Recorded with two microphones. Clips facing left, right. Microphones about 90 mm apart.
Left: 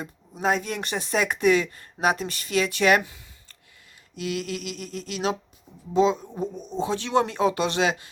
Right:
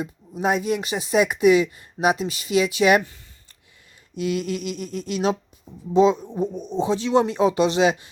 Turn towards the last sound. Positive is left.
turn(degrees=-20)  # may be behind; listen again after turning